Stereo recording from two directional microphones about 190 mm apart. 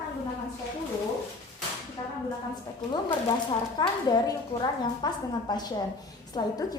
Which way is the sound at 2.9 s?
25° left (ahead or behind).